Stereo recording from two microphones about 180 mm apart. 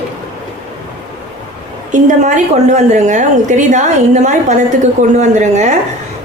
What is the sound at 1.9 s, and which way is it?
A woman's voice, 45° right (ahead or behind).